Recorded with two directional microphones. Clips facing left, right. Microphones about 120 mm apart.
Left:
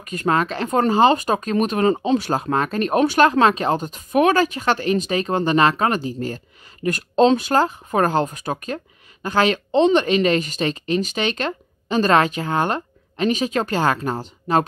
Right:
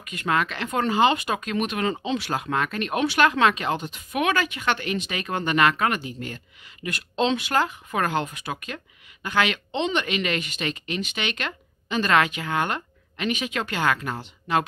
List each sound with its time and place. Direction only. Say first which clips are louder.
0.0 s speech: left 5 dB; 40° left (ahead or behind)